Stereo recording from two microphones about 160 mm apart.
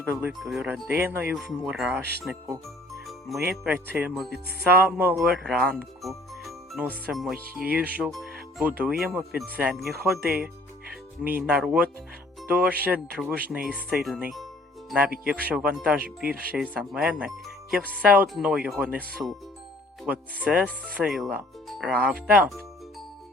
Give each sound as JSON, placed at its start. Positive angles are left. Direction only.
{"t": 0.0, "sound": "speech", "side_deg": -10}
{"t": 3.1, "sound": "jingle bell", "side_deg": 0}
{"t": 3.5, "sound": "speech", "side_deg": 0}
{"t": 8.1, "sound": "music", "side_deg": 0}
{"t": 8.8, "sound": "speech", "side_deg": -10}
{"t": 16.3, "sound": "speech", "side_deg": -65}
{"t": 16.7, "sound": "speech", "side_deg": -5}
{"t": 20.1, "sound": "speech", "side_deg": -10}